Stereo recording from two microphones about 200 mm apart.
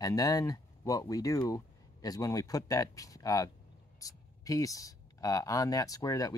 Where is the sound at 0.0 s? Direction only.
20° left (ahead or behind).